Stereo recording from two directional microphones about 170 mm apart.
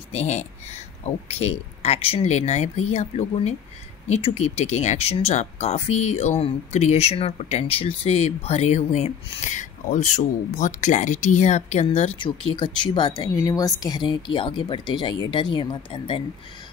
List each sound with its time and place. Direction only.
0.1 s speech: 40° left (ahead or behind)
12.2 s speech: 30° left (ahead or behind)